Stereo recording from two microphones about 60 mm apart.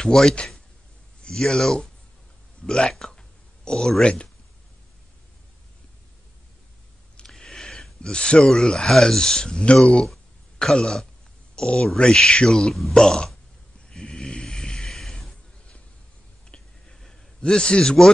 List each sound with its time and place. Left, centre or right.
0.0 s speech: centre
2.9 s a sound: centre
4.0 s speech: centre
7.2 s speech: centre
13.8 s vehicle: centre
16.4 s clicking: centre